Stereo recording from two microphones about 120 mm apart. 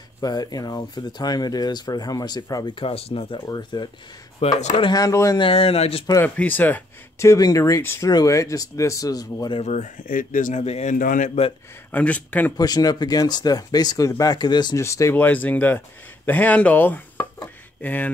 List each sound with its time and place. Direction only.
0.2 s speech: 35° left (ahead or behind)
2.7 s speech: 50° left (ahead or behind)
3.3 s speech: 35° left (ahead or behind)
4.4 s speech: 70° left (ahead or behind)
4.9 s speech: 30° left (ahead or behind)
5.4 s speech: 50° left (ahead or behind)
6.2 s speech: 15° left (ahead or behind); by 9.6 s 35° left (ahead or behind)
9.6 s speech: 75° left (ahead or behind)
11.9 s speech: 10° left (ahead or behind)
12.5 s speech: 35° left (ahead or behind)
14.8 s speech: 25° left (ahead or behind)